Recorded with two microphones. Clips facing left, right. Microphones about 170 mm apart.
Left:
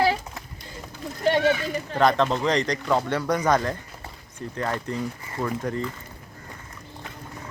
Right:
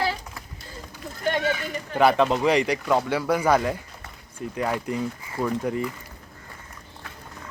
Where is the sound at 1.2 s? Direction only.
30° left (ahead or behind).